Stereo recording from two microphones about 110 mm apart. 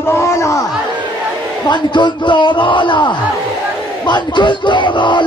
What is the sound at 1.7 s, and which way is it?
Speech, 45° left (ahead or behind).